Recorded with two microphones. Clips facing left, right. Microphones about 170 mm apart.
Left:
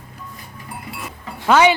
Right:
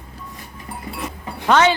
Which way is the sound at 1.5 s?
10° left (ahead or behind).